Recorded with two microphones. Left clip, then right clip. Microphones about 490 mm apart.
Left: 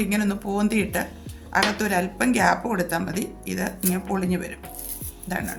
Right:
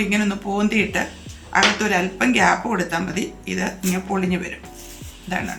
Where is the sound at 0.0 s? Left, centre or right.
Left.